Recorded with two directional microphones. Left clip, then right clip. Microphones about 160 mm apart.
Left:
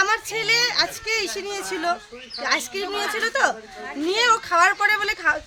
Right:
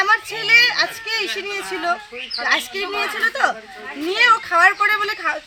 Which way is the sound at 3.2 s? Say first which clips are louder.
Right 2 dB; 30° left (ahead or behind).